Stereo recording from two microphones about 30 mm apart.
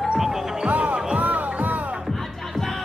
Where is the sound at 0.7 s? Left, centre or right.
Right.